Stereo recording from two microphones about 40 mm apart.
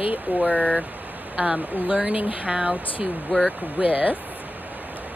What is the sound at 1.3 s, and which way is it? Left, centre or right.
Speech, right.